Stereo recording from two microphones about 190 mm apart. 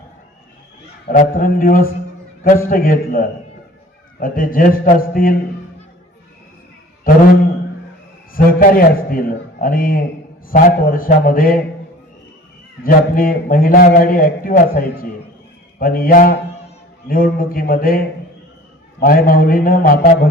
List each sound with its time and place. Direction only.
1.0 s a man's voice: 45° left (ahead or behind)
8.3 s a man's voice: 50° left (ahead or behind)
12.8 s a man's voice: 45° left (ahead or behind)